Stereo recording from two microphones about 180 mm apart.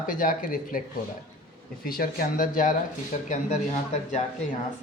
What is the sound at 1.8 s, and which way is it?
Speech, 55° left (ahead or behind).